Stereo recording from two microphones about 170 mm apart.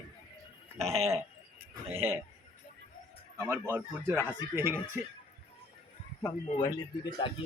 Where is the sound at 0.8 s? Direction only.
15° right (ahead or behind).